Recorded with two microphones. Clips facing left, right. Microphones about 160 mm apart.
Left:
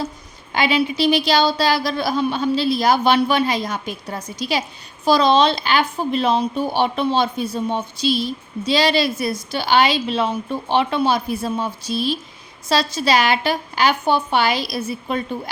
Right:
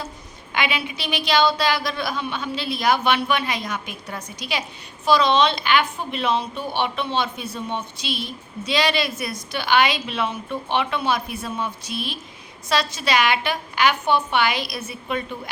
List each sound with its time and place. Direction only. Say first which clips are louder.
0.5 s a woman's voice: left 7 dB; 35° left (ahead or behind)